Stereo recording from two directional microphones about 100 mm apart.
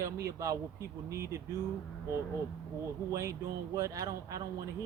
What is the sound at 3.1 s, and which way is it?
Speech, 35° right (ahead or behind).